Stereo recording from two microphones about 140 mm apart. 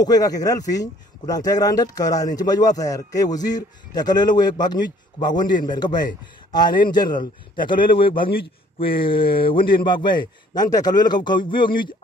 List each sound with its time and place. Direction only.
0.0 s a man's voice: 25° left (ahead or behind)